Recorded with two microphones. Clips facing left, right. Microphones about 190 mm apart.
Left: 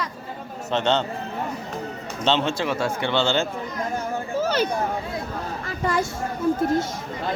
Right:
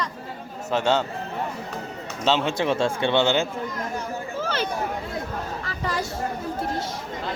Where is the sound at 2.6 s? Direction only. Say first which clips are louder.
Right 2 dB; 25° right (ahead or behind).